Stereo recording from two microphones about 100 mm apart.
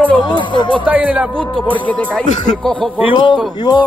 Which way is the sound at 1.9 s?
15° left (ahead or behind).